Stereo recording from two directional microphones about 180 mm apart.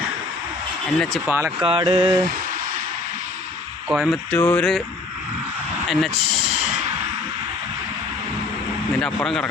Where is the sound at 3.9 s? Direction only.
Centre (ahead or behind).